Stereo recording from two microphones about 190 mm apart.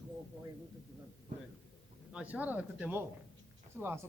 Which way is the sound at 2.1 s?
5° right (ahead or behind).